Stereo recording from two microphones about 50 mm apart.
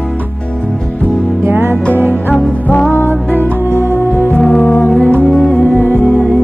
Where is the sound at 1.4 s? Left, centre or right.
Right.